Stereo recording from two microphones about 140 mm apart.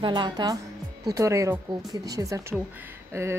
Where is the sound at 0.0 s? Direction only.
35° right (ahead or behind).